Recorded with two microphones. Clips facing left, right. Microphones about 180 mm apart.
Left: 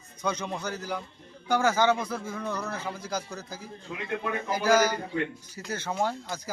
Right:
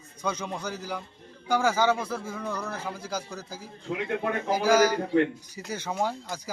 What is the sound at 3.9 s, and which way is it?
Speech, 55° right (ahead or behind).